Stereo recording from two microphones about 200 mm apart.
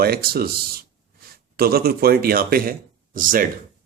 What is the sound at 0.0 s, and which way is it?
Speech, 50° right (ahead or behind).